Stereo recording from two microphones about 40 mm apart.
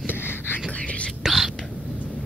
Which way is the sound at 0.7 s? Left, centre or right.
Left.